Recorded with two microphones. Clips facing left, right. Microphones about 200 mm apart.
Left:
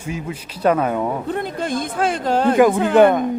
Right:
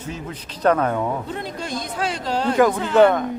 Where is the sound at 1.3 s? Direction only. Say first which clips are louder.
Left 6 dB; 50° left (ahead or behind).